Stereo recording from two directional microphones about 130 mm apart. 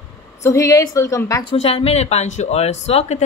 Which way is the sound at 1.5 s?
50° left (ahead or behind).